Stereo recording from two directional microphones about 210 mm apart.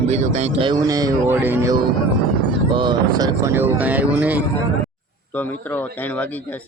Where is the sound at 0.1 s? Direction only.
30° right (ahead or behind); by 1.7 s 10° right (ahead or behind).